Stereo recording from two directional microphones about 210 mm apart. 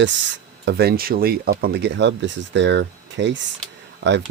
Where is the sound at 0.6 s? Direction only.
50° right (ahead or behind).